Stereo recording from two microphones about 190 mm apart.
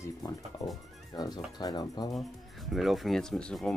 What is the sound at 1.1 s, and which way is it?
Speech, 20° left (ahead or behind).